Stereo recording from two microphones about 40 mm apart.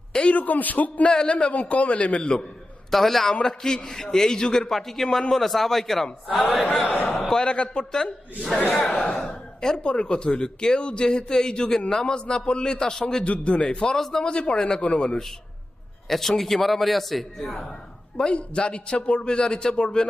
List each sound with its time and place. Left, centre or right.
0.1 s a man's voice: left
0.3 s a man's voice: left
1.0 s speech: left
2.9 s a man's voice: centre
4.7 s a man's voice: centre
6.8 s a man's voice: left
7.1 s a sound: centre
7.4 s a man's voice: left
13.2 s a man's voice: left
13.9 s a man's voice: centre
14.3 s speech: left
14.8 s speech: left
16.0 s a man's voice: centre
18.3 s speech: left